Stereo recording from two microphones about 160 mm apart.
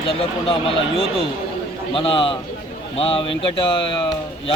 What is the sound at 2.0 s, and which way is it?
Speech, 35° left (ahead or behind).